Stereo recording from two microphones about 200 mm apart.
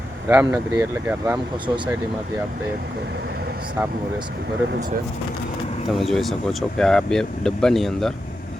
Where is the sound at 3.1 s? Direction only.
55° right (ahead or behind).